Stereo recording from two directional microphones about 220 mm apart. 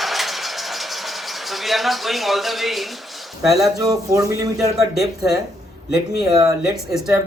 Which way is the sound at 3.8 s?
15° right (ahead or behind).